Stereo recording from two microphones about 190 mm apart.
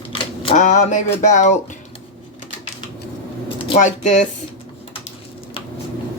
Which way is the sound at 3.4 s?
30° left (ahead or behind).